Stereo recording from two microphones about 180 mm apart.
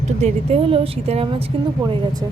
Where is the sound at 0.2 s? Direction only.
35° right (ahead or behind).